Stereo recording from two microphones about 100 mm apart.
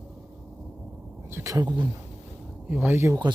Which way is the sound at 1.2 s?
30° right (ahead or behind).